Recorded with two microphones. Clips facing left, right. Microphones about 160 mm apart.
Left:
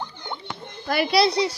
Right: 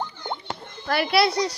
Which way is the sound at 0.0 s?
45° right (ahead or behind).